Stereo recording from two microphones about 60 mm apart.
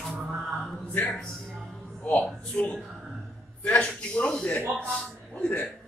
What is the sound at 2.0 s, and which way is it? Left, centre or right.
Music, left.